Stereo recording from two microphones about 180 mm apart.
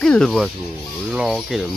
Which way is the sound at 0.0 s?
5° left (ahead or behind).